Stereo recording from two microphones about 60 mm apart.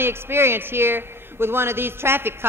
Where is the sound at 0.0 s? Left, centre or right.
Right.